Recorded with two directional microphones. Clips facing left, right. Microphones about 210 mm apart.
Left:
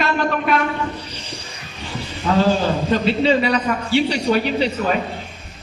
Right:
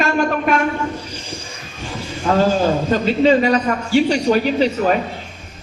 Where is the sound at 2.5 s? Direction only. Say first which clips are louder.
Right 1 dB; 45° right (ahead or behind).